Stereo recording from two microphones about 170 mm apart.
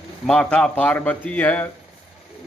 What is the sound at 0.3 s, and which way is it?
Speech, 5° left (ahead or behind).